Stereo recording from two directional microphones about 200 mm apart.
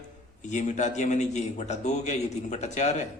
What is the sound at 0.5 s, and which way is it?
A man's voice, 35° left (ahead or behind).